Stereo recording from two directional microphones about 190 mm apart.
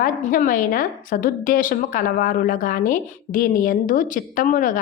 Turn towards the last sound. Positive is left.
turn(degrees=45)  # may be behind; listen again after turning